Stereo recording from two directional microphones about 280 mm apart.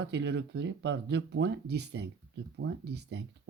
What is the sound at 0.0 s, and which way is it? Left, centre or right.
Speech, right.